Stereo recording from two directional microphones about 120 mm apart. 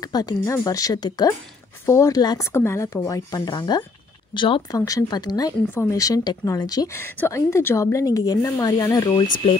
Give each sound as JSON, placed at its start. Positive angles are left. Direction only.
{"t": 0.0, "sound": "a woman's voice", "side_deg": 30}
{"t": 4.7, "sound": "a woman's voice", "side_deg": 30}
{"t": 7.0, "sound": "a woman's voice", "side_deg": 20}